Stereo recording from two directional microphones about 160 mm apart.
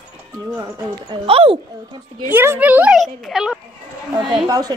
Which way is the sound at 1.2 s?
35° right (ahead or behind).